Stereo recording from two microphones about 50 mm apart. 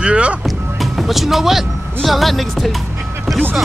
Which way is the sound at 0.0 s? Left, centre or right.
Right.